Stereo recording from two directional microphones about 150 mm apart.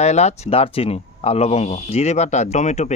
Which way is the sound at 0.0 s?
45° left (ahead or behind).